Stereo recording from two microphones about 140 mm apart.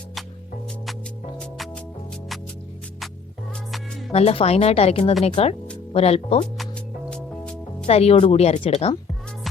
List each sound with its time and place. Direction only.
1.4 s music: 5° left (ahead or behind)
4.1 s speech: 45° left (ahead or behind)
7.1 s music: 5° left (ahead or behind)
7.9 s speech: 50° left (ahead or behind)